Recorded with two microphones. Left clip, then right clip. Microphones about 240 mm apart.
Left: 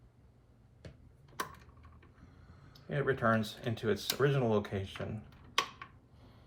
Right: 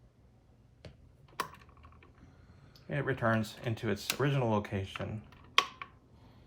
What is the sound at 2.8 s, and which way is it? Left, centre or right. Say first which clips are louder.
Speech: left 1 dB; right.